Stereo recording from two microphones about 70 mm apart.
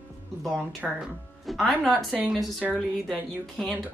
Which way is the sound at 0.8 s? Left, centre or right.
Centre.